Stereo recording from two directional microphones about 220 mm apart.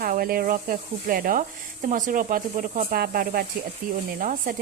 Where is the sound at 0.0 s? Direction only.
40° right (ahead or behind).